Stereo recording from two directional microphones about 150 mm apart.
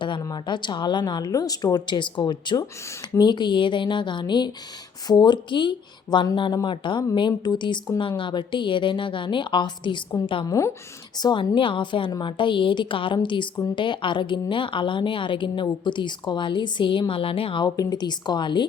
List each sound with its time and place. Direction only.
0.0 s speech: 30° left (ahead or behind)
10.5 s a woman's voice: 20° left (ahead or behind)
11.2 s speech: 30° left (ahead or behind)